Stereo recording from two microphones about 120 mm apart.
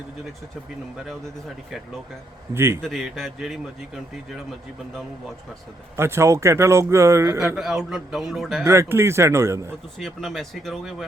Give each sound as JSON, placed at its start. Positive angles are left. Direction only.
{"t": 2.5, "sound": "speech", "side_deg": -20}
{"t": 2.8, "sound": "a man's voice", "side_deg": 0}
{"t": 6.0, "sound": "speech", "side_deg": -20}
{"t": 7.5, "sound": "a man's voice", "side_deg": -5}
{"t": 8.6, "sound": "speech", "side_deg": -20}
{"t": 10.0, "sound": "a man's voice", "side_deg": 0}